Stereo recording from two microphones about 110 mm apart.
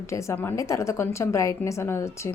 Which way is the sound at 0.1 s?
25° left (ahead or behind).